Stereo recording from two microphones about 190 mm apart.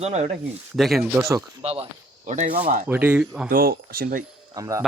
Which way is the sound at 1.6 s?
30° right (ahead or behind).